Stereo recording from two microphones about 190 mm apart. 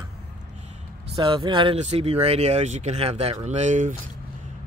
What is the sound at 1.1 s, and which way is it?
Speech, 25° right (ahead or behind).